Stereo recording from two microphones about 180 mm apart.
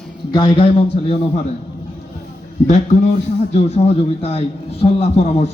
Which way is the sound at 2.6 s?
40° left (ahead or behind).